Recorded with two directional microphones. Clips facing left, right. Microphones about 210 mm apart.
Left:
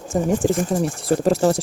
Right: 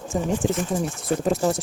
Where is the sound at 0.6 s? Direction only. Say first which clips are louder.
Left 4 dB; 50° left (ahead or behind).